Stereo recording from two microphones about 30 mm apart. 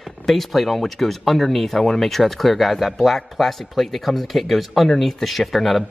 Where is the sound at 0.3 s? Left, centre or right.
Centre.